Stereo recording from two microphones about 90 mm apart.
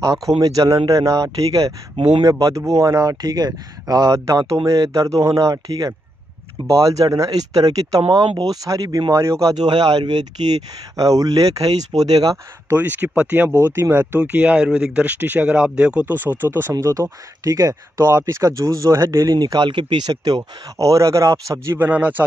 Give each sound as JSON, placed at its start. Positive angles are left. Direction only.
{"t": 0.0, "sound": "speech", "side_deg": -40}
{"t": 8.1, "sound": "speech", "side_deg": -60}
{"t": 8.5, "sound": "speech", "side_deg": -40}
{"t": 9.7, "sound": "speech", "side_deg": -55}
{"t": 12.6, "sound": "speech", "side_deg": -20}
{"t": 16.7, "sound": "speech", "side_deg": -35}
{"t": 20.7, "sound": "speech", "side_deg": -35}
{"t": 21.7, "sound": "speech", "side_deg": -15}